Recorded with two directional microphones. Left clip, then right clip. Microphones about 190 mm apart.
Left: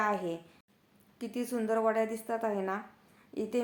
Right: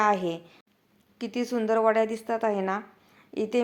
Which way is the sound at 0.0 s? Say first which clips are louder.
Right 7 dB; 25° right (ahead or behind).